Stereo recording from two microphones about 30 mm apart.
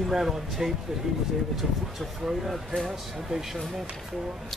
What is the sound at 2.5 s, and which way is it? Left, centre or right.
Speech, centre.